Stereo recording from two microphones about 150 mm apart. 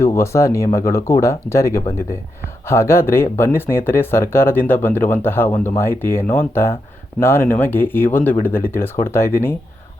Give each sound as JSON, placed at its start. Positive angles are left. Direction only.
{"t": 0.0, "sound": "speech", "side_deg": 20}